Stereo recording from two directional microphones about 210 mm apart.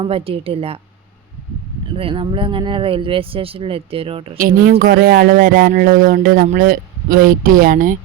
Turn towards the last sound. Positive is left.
turn(degrees=-40)  # may be behind; listen again after turning